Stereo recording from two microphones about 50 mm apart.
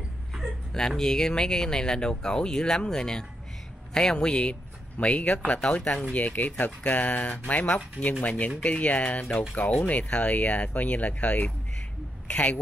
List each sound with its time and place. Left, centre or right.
0.7 s speech: centre
6.1 s speech: left